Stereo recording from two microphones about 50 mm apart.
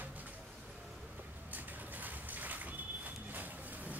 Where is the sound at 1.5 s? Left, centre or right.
Right.